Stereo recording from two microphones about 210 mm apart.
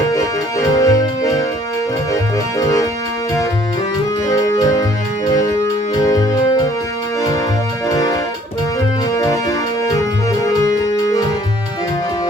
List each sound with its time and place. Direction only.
0.7 s music: 15° left (ahead or behind)
2.6 s music: 15° left (ahead or behind)
4.3 s music: 15° left (ahead or behind)
6.0 s music: 15° left (ahead or behind)
7.9 s music: 15° left (ahead or behind)